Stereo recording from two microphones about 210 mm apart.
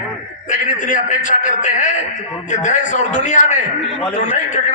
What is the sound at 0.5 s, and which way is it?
A man's voice, 40° left (ahead or behind).